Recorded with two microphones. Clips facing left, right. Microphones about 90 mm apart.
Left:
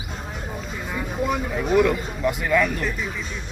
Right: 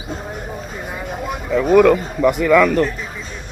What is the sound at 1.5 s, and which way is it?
Speech, 70° right (ahead or behind).